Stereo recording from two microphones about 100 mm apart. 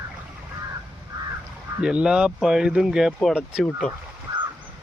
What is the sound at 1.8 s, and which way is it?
Speech, 10° right (ahead or behind).